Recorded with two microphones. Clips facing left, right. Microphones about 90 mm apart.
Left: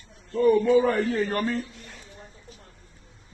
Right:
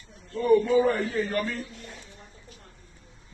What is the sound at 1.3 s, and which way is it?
Speech, 35° left (ahead or behind).